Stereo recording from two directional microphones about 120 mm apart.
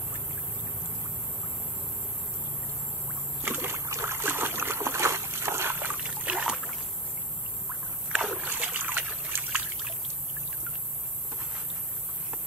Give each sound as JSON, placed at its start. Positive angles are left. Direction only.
{"t": 3.4, "sound": "boat", "side_deg": -20}
{"t": 8.1, "sound": "boat", "side_deg": -5}
{"t": 8.5, "sound": "boat", "side_deg": -15}